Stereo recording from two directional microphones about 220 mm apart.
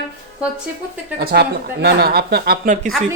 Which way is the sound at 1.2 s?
45° right (ahead or behind).